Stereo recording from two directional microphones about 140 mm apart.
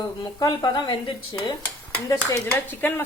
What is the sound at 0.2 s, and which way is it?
Speech, 30° left (ahead or behind).